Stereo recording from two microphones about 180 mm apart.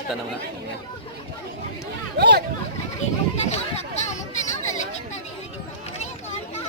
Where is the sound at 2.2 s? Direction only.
65° right (ahead or behind).